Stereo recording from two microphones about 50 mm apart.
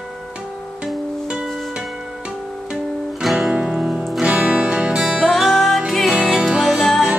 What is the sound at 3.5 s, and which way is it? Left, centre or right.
Music, right.